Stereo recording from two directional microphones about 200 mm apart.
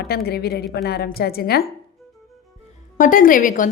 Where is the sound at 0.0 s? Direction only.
50° left (ahead or behind).